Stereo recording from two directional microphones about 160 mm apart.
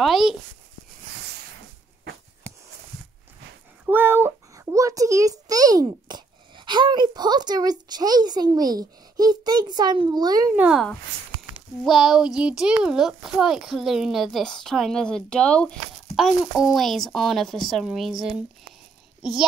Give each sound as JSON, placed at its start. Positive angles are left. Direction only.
{"t": 0.0, "sound": "speech", "side_deg": 0}
{"t": 3.8, "sound": "a child's voice", "side_deg": -15}
{"t": 10.5, "sound": "speech", "side_deg": -5}